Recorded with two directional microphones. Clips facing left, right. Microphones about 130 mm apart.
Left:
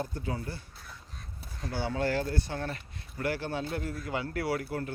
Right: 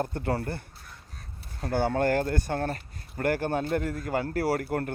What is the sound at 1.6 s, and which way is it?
Speech, 55° right (ahead or behind).